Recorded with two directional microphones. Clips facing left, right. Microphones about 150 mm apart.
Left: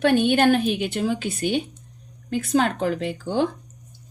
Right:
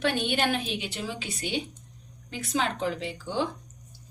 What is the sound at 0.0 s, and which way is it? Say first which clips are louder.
A woman's voice: left 9 dB; 50° left (ahead or behind).